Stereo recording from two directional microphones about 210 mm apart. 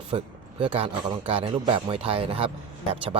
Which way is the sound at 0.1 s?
25° right (ahead or behind).